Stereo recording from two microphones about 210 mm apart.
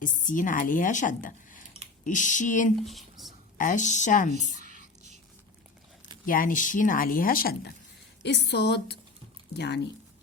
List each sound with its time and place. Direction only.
0.0 s a woman's voice: 40° left (ahead or behind)
2.8 s a sound: centre (ahead or behind)
3.6 s a woman's voice: 35° left (ahead or behind)
4.4 s whispering: 35° right (ahead or behind)
6.2 s a woman's voice: 40° left (ahead or behind)